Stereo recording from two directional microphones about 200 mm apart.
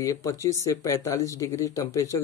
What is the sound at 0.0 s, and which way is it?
Speech, 15° left (ahead or behind).